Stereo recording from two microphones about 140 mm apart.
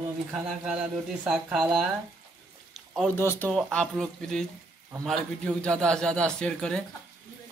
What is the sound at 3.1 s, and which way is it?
Speech, 15° left (ahead or behind).